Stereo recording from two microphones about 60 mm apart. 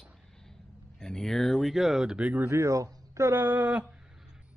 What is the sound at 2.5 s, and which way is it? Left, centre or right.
Speech, right.